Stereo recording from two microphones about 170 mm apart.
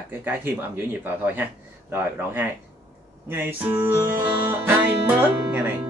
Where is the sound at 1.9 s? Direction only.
10° right (ahead or behind).